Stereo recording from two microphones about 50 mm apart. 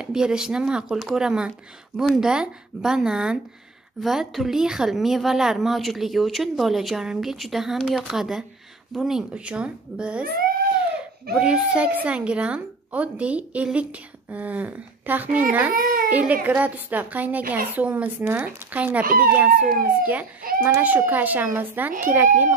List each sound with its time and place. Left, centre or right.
0.0 s speech: centre
0.8 s speech: centre
9.3 s a woman's voice: right
11.3 s a woman's voice: right